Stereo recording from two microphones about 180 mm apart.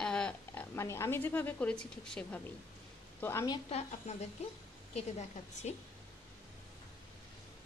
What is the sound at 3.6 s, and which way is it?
A woman's voice, 35° left (ahead or behind).